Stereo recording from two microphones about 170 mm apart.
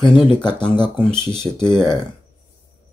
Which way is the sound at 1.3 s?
15° right (ahead or behind).